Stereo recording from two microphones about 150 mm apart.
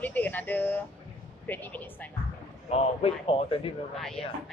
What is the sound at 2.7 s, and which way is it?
A man's voice, 40° left (ahead or behind).